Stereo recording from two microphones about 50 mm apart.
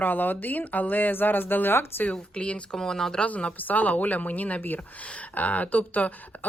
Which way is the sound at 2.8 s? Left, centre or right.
Centre.